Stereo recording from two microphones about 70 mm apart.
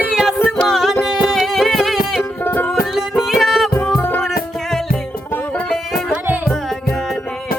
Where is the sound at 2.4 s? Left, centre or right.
Left.